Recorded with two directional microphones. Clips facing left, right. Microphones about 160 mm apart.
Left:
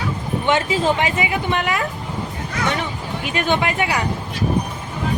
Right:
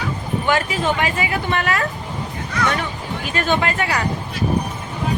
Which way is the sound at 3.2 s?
15° left (ahead or behind).